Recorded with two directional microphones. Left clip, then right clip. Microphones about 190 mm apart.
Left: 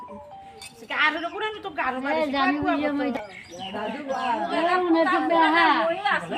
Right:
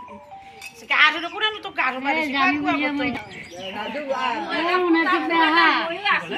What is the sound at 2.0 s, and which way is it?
A woman's voice, 15° left (ahead or behind).